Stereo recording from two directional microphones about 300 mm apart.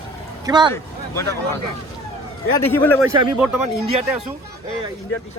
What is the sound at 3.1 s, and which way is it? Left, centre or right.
Speech, centre.